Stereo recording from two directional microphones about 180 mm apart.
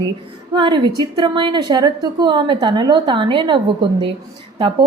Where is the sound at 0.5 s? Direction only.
25° right (ahead or behind).